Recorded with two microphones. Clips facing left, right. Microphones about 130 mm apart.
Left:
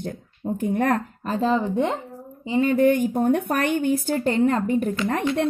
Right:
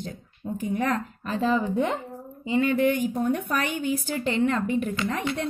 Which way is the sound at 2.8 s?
50° left (ahead or behind).